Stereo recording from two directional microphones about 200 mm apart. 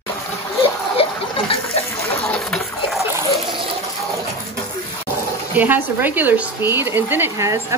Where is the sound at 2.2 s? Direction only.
5° left (ahead or behind).